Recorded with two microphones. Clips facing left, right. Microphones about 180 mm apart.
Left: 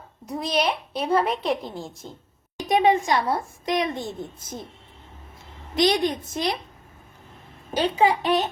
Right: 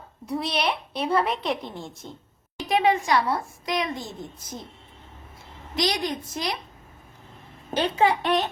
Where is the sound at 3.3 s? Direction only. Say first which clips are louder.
Left 2 dB; 25° left (ahead or behind).